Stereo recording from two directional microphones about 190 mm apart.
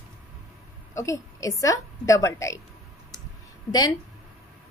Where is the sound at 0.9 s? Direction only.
15° left (ahead or behind).